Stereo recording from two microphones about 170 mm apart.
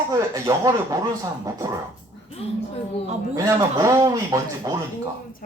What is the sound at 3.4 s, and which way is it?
Speech, 20° right (ahead or behind).